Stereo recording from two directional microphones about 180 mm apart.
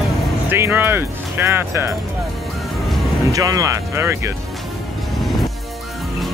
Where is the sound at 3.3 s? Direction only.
20° right (ahead or behind).